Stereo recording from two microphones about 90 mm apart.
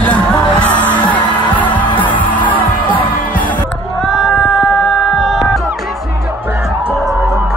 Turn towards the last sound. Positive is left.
turn(degrees=0)  # may be behind; listen again after turning